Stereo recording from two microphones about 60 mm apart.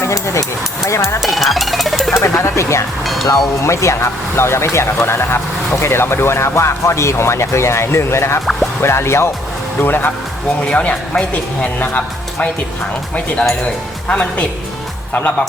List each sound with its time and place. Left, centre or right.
0.9 s speech: left
1.2 s speech: centre
2.1 s speech: left
3.0 s speech: centre
3.6 s speech: left
9.8 s speech: left
10.7 s speech: centre
14.1 s a woman's voice: left